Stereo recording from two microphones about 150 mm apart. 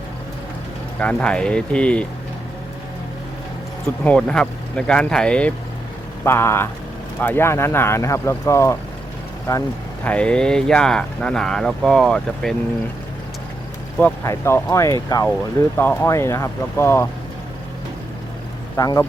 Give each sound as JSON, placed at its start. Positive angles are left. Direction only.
{"t": 0.9, "sound": "speech", "side_deg": 10}
{"t": 4.0, "sound": "speech", "side_deg": 5}
{"t": 14.0, "sound": "speech", "side_deg": 15}
{"t": 18.8, "sound": "speech", "side_deg": 25}